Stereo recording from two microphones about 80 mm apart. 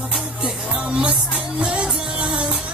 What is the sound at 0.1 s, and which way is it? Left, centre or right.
Music, centre.